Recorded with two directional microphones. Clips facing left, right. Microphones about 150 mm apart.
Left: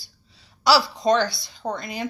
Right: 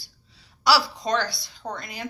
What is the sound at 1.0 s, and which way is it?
Speech, 25° left (ahead or behind).